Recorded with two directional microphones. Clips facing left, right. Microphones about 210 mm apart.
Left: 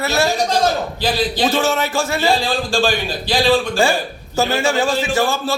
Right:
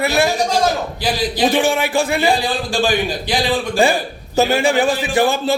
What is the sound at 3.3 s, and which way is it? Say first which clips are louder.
Speech: left 3 dB; 20° right (ahead or behind).